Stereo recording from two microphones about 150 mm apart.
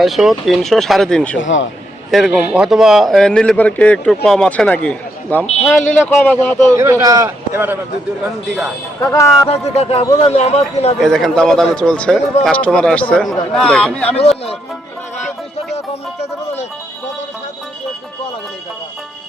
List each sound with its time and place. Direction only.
0.0 s a man's voice: centre (ahead or behind)
6.7 s a man's voice: 20° right (ahead or behind)
9.0 s speech: 20° left (ahead or behind)
9.5 s speech: 40° left (ahead or behind)
11.0 s a man's voice: centre (ahead or behind)
14.2 s speech: 40° left (ahead or behind)